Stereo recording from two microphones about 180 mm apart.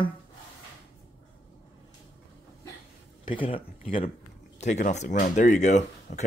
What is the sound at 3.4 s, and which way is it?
Speech, 30° left (ahead or behind).